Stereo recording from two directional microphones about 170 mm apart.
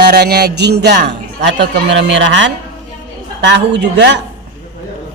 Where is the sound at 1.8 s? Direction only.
90° right.